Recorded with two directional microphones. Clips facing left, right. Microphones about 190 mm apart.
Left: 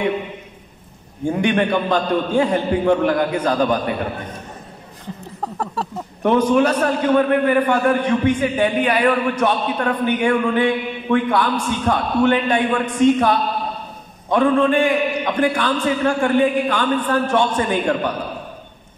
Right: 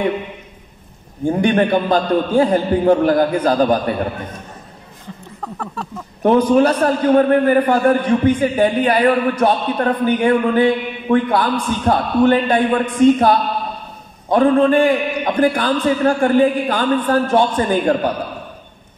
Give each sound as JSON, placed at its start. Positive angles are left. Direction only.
{"t": 1.2, "sound": "a man's voice", "side_deg": -35}
{"t": 5.4, "sound": "speech", "side_deg": 35}
{"t": 6.2, "sound": "a man's voice", "side_deg": -35}